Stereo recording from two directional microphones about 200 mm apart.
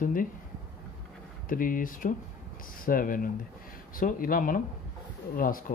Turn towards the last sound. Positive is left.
turn(degrees=45)  # may be behind; listen again after turning